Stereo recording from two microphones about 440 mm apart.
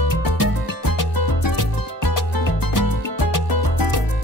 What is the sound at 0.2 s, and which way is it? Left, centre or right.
Music, left.